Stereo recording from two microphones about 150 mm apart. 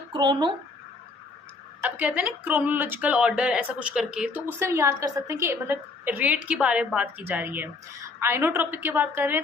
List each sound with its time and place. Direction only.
0.1 s speech: 30° right (ahead or behind)
1.8 s speech: 10° right (ahead or behind)